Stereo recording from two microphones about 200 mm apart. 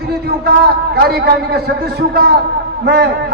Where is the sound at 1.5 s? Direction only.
50° right (ahead or behind).